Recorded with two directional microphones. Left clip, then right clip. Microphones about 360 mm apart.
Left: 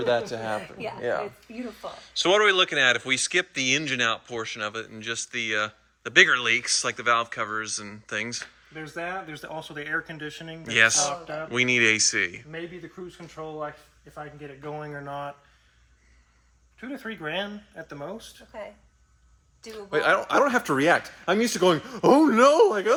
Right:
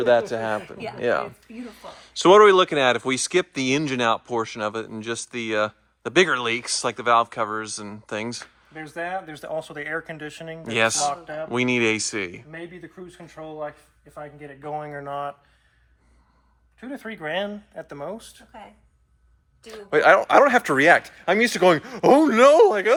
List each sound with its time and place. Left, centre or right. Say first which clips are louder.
0.0 s speech: right 6 dB; right
0.8 s speech: even; centre
1.6 s speech: left 4 dB; centre
8.8 s speech: right 3 dB; right
10.5 s speech: left 1 dB; centre
16.8 s speech: right 2 dB; right
20.1 s speech: right 6 dB; centre